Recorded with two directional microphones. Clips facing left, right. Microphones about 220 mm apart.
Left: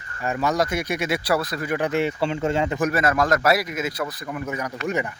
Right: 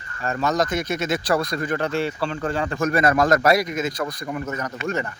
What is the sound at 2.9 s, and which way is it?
Speech, centre (ahead or behind).